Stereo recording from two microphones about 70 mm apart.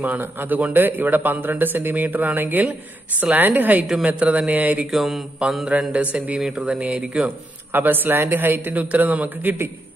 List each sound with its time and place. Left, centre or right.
0.0 s a man's voice: right
3.8 s mantra: centre
4.2 s a man's voice: centre
4.9 s mantra: centre
5.7 s mantra: centre
6.1 s a man's voice: centre
7.2 s a man's voice: right